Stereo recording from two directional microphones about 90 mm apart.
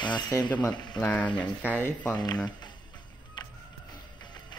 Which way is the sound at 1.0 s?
15° left (ahead or behind).